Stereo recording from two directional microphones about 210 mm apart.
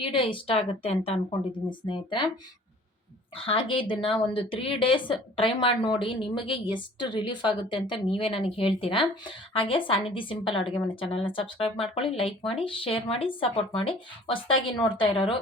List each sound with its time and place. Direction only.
0.0 s a woman's voice: 25° left (ahead or behind)
3.3 s a woman's voice: 25° left (ahead or behind)